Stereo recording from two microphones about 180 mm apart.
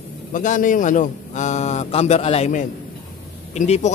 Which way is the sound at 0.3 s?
45° left (ahead or behind).